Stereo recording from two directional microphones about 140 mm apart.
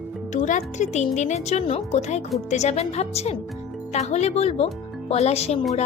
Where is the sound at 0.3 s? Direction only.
60° left (ahead or behind).